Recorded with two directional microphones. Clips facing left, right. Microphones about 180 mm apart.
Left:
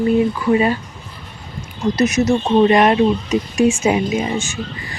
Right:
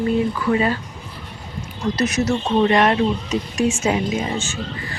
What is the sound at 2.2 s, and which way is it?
Speech, 15° left (ahead or behind).